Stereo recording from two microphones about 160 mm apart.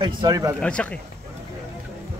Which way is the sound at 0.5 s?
5° left (ahead or behind).